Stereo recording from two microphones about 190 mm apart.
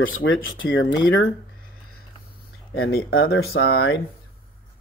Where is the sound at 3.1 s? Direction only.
90° left.